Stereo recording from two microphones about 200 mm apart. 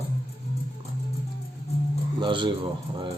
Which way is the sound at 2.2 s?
25° right (ahead or behind).